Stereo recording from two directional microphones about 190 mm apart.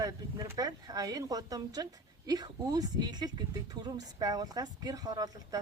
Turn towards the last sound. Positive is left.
turn(degrees=-20)  # may be behind; listen again after turning